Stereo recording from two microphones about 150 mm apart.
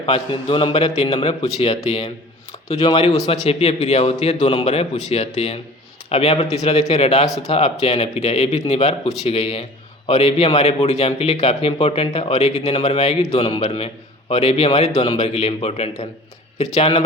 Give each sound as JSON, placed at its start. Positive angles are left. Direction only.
{"t": 0.0, "sound": "a man's voice", "side_deg": 35}